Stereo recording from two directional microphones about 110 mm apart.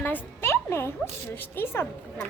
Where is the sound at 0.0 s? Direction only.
20° left (ahead or behind).